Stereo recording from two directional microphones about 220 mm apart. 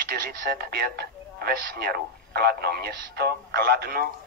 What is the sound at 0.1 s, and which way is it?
Speech, 45° right (ahead or behind).